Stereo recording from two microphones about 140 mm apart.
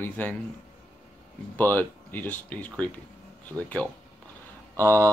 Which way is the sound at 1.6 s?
15° left (ahead or behind).